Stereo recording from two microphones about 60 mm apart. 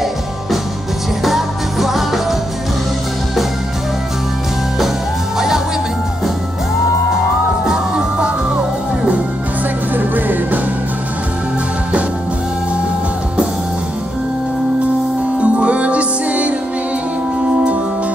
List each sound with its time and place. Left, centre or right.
1.2 s music: centre
9.9 s music: right
15.4 s music: right